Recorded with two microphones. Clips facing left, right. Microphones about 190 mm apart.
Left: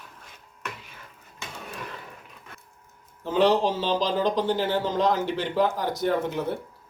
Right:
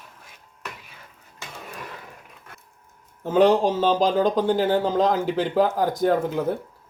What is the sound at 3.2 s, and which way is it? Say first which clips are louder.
Speech: right 4 dB; 45° right (ahead or behind).